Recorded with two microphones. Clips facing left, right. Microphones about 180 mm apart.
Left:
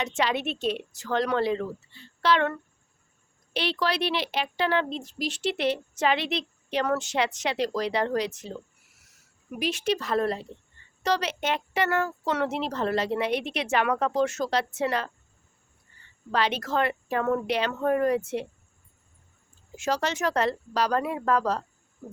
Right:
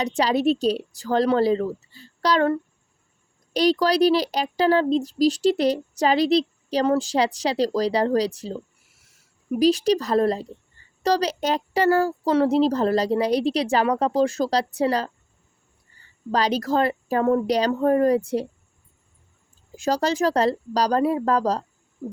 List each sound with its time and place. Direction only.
0.0 s speech: 35° right (ahead or behind)
16.3 s speech: 35° right (ahead or behind)
19.7 s speech: 35° right (ahead or behind)